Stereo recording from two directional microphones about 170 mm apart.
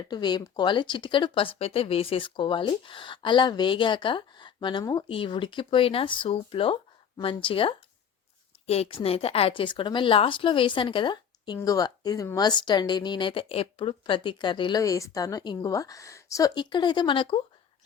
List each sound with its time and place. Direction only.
0.1 s speech: 25° left (ahead or behind)